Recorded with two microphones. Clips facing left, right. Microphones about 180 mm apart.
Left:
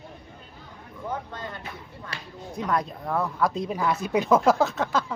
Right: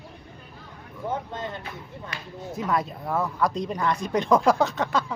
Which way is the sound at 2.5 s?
Centre (ahead or behind).